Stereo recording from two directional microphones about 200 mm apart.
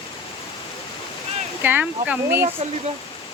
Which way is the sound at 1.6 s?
10° right (ahead or behind).